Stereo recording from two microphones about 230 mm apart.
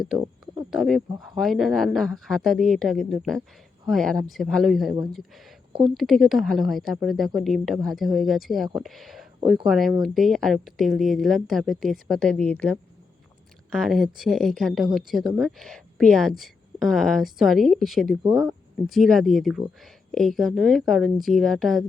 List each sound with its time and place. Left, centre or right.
0.7 s speech: centre
5.7 s speech: right
6.0 s speech: centre